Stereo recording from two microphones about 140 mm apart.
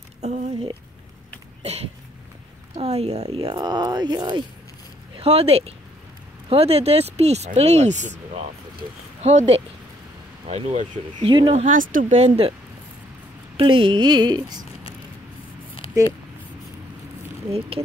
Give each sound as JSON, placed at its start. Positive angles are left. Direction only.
{"t": 0.2, "sound": "a sound", "side_deg": -50}
{"t": 2.8, "sound": "speech", "side_deg": -50}
{"t": 5.1, "sound": "speech", "side_deg": -45}
{"t": 11.1, "sound": "speech", "side_deg": -35}
{"t": 11.5, "sound": "speech", "side_deg": -65}
{"t": 12.2, "sound": "speech", "side_deg": -40}
{"t": 13.6, "sound": "speech", "side_deg": -40}
{"t": 17.5, "sound": "speech", "side_deg": -45}